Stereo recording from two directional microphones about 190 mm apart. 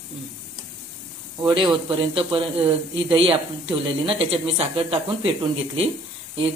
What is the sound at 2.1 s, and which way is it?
Speech, 25° right (ahead or behind).